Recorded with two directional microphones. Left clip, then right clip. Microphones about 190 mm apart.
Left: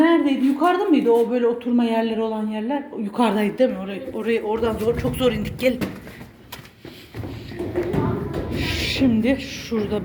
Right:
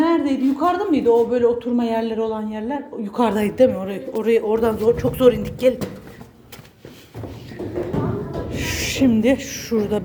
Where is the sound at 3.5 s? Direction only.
20° right (ahead or behind).